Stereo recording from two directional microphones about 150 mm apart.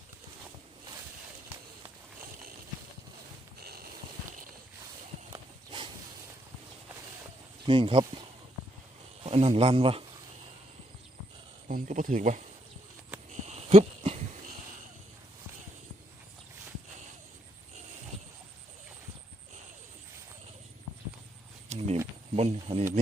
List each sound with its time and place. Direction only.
3.6 s snort: 90° right
5.3 s walk: 30° right (ahead or behind)
7.7 s speech: 35° right (ahead or behind)
9.2 s speech: 40° right (ahead or behind)
11.7 s speech: 60° right (ahead or behind)
13.5 s a sound: 45° right (ahead or behind)
21.7 s a sound: 45° right (ahead or behind)